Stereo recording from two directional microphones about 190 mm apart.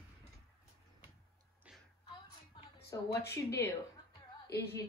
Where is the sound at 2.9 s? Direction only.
15° left (ahead or behind).